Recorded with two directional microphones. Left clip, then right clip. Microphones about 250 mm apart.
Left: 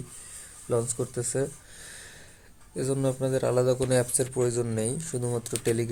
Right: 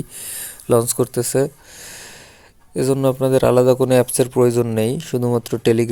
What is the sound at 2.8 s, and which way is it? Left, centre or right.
Speech, right.